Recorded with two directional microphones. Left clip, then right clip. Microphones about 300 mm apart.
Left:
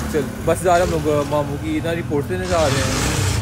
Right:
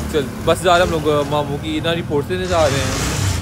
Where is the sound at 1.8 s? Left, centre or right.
Centre.